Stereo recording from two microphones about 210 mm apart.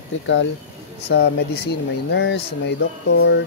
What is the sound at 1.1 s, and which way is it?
Speech, 50° left (ahead or behind).